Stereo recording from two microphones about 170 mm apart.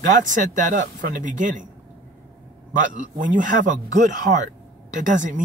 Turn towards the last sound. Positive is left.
turn(degrees=-50)  # may be behind; listen again after turning